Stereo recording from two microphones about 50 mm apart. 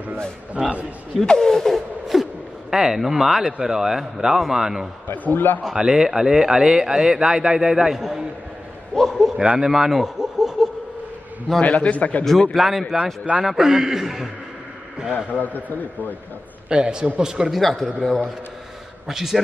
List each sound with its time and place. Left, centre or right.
0.6 s speech: right
1.2 s a sound: centre
2.7 s speech: centre
5.0 s a man's voice: left
5.6 s speech: centre
8.9 s a sound: centre
9.4 s speech: centre
9.7 s laughter: centre
11.6 s a man's voice: left
12.5 s a man's voice: centre
15.2 s a man's voice: left
16.6 s speech: centre
17.5 s speech: centre
19.0 s speech: centre